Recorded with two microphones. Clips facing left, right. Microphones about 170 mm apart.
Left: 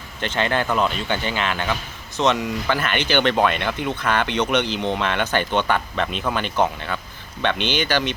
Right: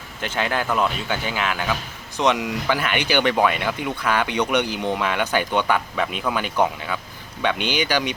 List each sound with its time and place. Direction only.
0.2 s speech: 5° right (ahead or behind)